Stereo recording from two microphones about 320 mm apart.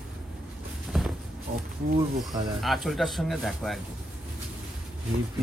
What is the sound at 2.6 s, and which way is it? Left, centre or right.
Speech, centre.